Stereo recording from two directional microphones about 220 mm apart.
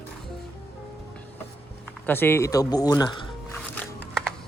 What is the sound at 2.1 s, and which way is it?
Speech, 10° left (ahead or behind).